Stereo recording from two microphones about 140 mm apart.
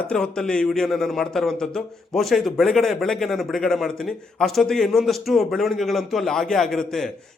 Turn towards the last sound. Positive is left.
turn(degrees=5)  # may be behind; listen again after turning